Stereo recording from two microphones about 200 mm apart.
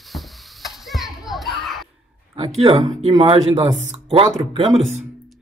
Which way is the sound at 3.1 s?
30° right (ahead or behind).